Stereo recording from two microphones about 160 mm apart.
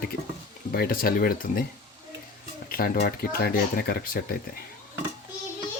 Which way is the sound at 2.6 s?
65° left (ahead or behind).